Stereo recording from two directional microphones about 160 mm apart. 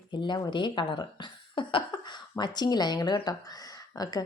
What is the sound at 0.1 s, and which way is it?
Speech, 30° left (ahead or behind).